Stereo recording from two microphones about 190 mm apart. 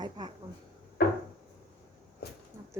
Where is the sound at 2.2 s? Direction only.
55° left (ahead or behind).